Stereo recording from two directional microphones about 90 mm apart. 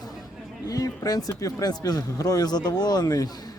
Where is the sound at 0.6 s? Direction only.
40° left (ahead or behind).